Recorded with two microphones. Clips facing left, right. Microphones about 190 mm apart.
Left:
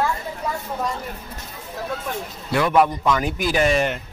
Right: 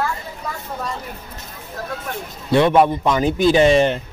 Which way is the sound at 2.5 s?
25° right (ahead or behind).